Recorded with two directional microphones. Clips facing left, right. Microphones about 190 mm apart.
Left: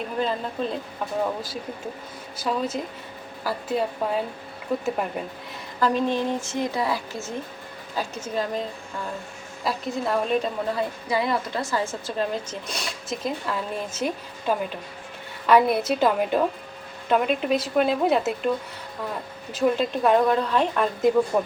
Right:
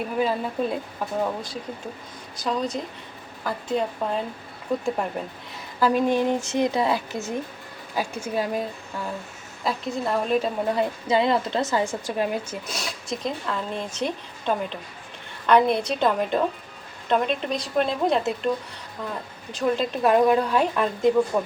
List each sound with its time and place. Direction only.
0.2 s a woman's voice: 5° right (ahead or behind)
1.2 s a woman's voice: 5° left (ahead or behind)
5.8 s a woman's voice: 10° right (ahead or behind)
9.6 s a woman's voice: centre (ahead or behind)
10.8 s a woman's voice: 25° right (ahead or behind); by 18.5 s 5° left (ahead or behind)
19.5 s a woman's voice: 5° left (ahead or behind)